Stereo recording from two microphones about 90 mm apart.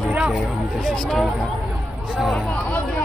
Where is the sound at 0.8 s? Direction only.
5° left (ahead or behind).